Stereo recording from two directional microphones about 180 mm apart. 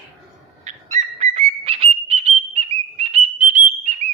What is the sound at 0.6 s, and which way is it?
Bird, 40° right (ahead or behind).